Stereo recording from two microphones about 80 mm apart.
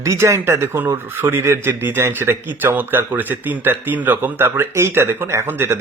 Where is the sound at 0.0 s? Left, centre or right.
Right.